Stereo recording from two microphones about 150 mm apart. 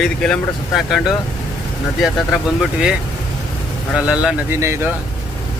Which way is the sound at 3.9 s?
5° right (ahead or behind).